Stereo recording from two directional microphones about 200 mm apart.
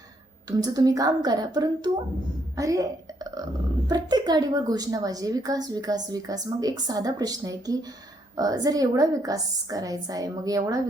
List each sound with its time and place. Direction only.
0.5 s a woman's voice: 20° right (ahead or behind)
3.8 s a woman's voice: 20° right (ahead or behind)